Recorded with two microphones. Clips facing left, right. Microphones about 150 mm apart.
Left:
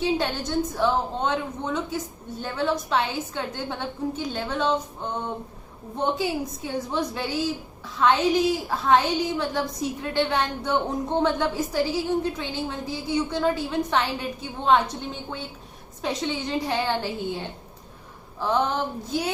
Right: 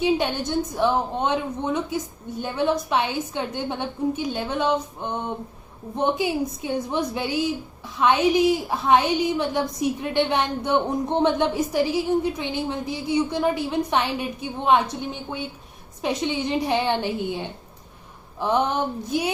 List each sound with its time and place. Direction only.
0.8 s a woman's voice: 15° right (ahead or behind)
16.0 s a woman's voice: 15° right (ahead or behind)